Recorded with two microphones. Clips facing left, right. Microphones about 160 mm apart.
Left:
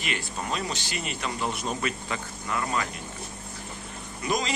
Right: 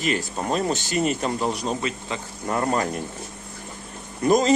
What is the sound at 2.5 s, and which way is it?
Speech, 45° right (ahead or behind).